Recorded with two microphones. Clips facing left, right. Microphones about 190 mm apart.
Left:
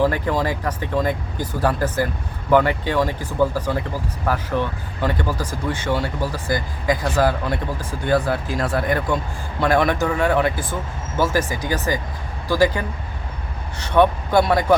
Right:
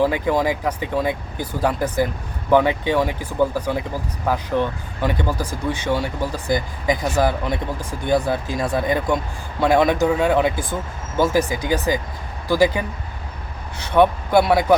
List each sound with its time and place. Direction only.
0.0 s a man's voice: 15° right (ahead or behind)